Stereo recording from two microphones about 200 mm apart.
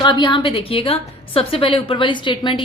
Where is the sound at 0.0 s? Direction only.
20° left (ahead or behind).